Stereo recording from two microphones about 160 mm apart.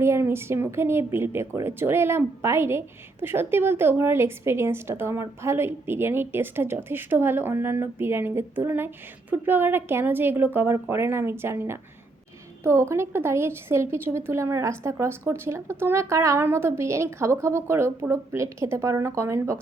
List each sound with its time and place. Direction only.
0.0 s speech: 15° right (ahead or behind)